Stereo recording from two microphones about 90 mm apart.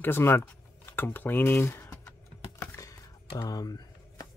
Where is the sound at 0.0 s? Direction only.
25° left (ahead or behind).